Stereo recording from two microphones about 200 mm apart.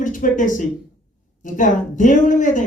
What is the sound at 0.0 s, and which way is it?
A man's voice, 40° left (ahead or behind).